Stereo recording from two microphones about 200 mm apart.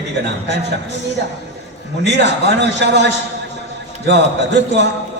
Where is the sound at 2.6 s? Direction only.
60° right (ahead or behind).